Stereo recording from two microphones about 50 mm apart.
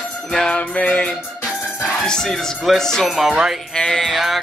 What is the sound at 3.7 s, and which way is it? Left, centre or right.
Music, centre.